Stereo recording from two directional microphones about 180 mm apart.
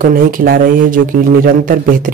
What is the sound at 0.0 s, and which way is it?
Speech, 50° right (ahead or behind).